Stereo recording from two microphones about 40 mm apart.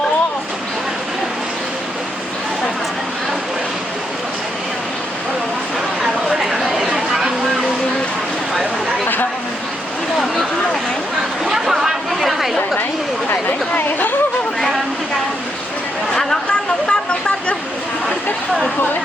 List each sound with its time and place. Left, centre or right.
6.4 s chatter: centre
11.4 s a sound: centre
13.3 s chatter: left
16.8 s vehicle: left